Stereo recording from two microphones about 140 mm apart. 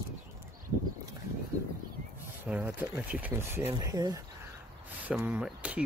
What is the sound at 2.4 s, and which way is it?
Speech, 10° right (ahead or behind).